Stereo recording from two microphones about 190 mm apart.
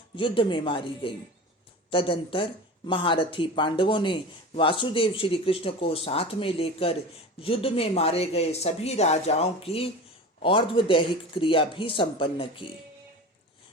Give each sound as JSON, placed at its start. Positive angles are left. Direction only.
{"t": 0.2, "sound": "speech", "side_deg": 25}